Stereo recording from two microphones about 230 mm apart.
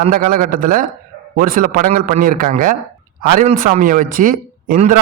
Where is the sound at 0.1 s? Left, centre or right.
Right.